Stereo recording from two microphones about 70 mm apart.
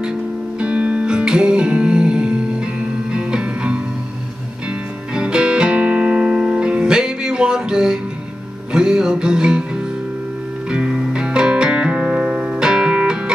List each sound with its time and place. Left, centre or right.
0.6 s music: centre
5.1 s music: centre